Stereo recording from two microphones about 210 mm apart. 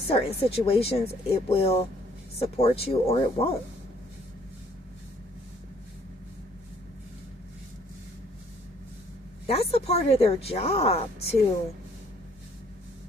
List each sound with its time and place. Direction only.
0.1 s speech: 30° left (ahead or behind)
9.5 s speech: 30° left (ahead or behind)